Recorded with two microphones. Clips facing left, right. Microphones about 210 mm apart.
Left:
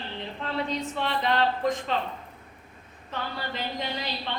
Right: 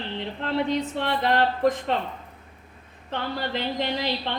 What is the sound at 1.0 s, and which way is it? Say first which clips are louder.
Speech: right 1 dB; 60° right (ahead or behind).